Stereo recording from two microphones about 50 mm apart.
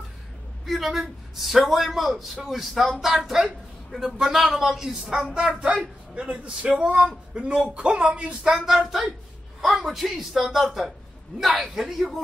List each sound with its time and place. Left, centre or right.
0.7 s a man's voice: centre